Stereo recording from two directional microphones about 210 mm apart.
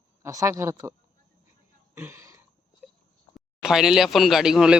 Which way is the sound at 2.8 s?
5° right (ahead or behind).